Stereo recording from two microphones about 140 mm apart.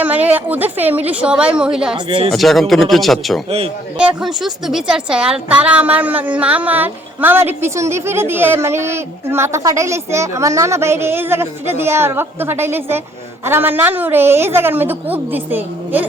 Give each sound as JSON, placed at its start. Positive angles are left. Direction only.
{"t": 0.0, "sound": "a woman's voice", "side_deg": -10}
{"t": 2.0, "sound": "speech", "side_deg": -40}
{"t": 2.3, "sound": "a woman's voice", "side_deg": 0}